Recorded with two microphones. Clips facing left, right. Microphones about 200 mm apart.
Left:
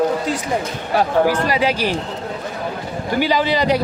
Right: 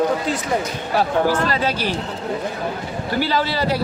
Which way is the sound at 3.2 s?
15° left (ahead or behind).